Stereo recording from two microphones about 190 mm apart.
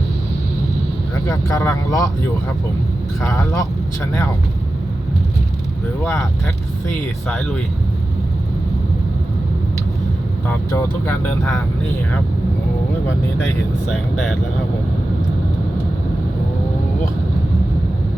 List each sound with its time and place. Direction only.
1.3 s speech: 15° left (ahead or behind)
3.2 s speech: 15° left (ahead or behind)
7.3 s speech: 5° left (ahead or behind)
10.7 s speech: 15° left (ahead or behind)